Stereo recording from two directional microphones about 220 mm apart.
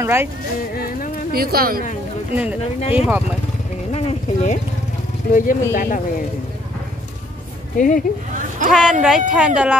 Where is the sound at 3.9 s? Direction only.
30° left (ahead or behind).